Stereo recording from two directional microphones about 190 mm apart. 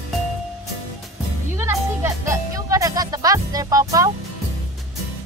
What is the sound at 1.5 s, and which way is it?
Music, 15° right (ahead or behind).